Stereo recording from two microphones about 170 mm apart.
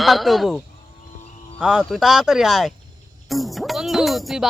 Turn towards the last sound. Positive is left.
turn(degrees=0)  # may be behind; listen again after turning